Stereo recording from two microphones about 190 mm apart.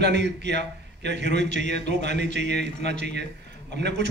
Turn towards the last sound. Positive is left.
turn(degrees=-65)  # may be behind; listen again after turning